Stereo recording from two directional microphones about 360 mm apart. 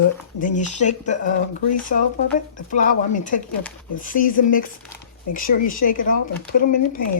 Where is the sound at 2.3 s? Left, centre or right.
Left.